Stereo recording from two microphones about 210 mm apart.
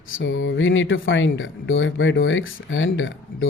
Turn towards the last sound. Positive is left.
turn(degrees=70)  # may be behind; listen again after turning